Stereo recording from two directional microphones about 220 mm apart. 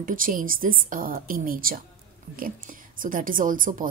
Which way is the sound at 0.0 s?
40° right (ahead or behind).